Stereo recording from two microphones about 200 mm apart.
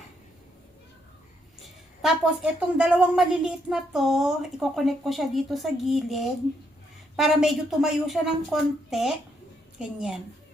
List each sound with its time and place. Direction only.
2.0 s a woman's voice: 5° right (ahead or behind)